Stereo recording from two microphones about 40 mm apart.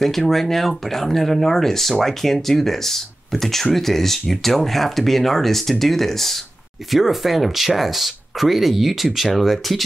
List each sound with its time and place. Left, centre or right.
0.0 s speech: centre
6.9 s speech: centre